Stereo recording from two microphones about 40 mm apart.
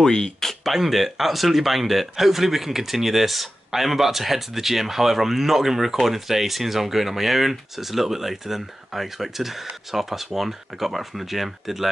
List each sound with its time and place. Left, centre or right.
0.0 s speech: centre
0.5 s speech: centre